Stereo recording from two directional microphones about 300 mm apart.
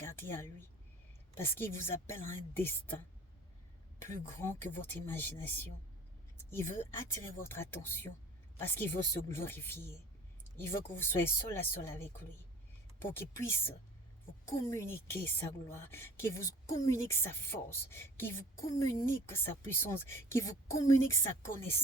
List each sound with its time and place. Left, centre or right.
0.0 s a woman's voice: centre
4.0 s a woman's voice: centre
11.0 s a woman's voice: centre